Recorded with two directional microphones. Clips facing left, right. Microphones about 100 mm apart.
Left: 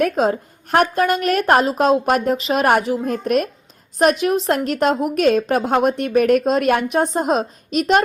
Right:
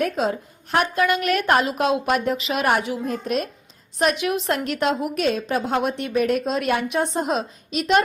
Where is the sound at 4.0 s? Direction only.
40° left (ahead or behind).